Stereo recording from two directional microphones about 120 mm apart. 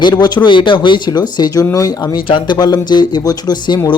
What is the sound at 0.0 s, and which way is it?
Speech, 35° left (ahead or behind).